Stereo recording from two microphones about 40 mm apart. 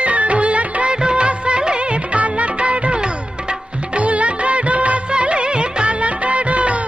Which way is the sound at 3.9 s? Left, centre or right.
Right.